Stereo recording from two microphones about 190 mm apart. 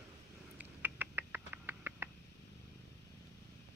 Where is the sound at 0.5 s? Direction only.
10° right (ahead or behind).